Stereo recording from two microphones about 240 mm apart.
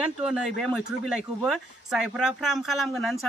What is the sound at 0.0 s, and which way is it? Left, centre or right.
Speech, centre.